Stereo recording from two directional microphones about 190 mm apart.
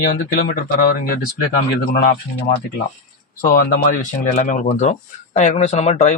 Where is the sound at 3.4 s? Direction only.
50° left (ahead or behind).